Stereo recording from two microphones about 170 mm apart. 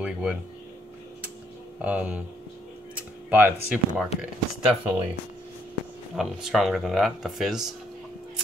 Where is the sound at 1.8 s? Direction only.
10° right (ahead or behind).